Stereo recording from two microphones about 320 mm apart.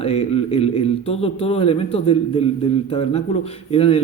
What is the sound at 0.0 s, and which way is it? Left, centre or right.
A man's voice, centre.